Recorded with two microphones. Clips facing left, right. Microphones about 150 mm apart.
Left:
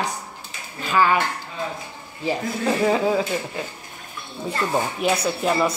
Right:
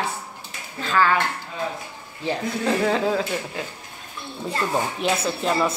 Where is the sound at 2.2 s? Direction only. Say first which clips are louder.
Left 1 dB; 5° left (ahead or behind).